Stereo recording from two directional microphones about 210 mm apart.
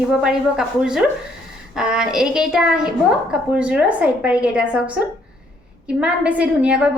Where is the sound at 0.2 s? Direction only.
5° right (ahead or behind).